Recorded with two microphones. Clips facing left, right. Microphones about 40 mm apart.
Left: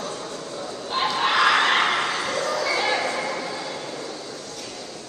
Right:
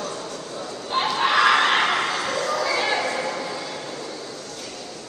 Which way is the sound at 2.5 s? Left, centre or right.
Centre.